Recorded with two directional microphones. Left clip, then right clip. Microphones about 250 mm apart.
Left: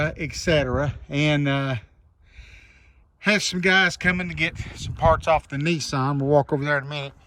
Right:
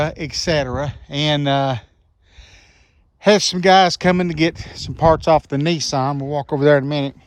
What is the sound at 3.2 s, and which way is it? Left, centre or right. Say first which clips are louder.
Speech: right 7 dB; centre.